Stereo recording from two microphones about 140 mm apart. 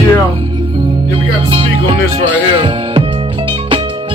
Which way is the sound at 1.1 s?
35° right (ahead or behind).